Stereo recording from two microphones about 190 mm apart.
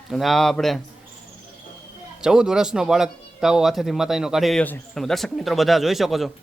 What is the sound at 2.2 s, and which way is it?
A man's voice, 5° right (ahead or behind).